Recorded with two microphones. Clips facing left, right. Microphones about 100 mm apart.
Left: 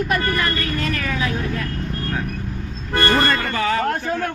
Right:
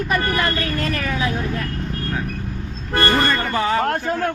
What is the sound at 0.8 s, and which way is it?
Speech, 30° right (ahead or behind).